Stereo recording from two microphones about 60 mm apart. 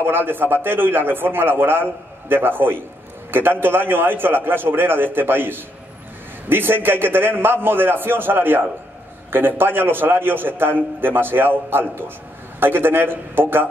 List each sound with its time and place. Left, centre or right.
0.0 s a man's voice: right